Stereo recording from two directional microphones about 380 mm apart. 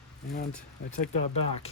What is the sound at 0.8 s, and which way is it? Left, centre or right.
Speech, left.